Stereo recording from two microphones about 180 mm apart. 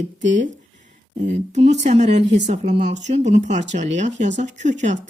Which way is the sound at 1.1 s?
40° right (ahead or behind).